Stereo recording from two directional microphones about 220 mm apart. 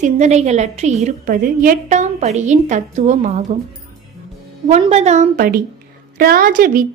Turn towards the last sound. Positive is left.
turn(degrees=-40)  # may be behind; listen again after turning